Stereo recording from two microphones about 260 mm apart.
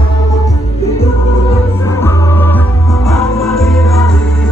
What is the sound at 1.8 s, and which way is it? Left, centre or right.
Music, centre.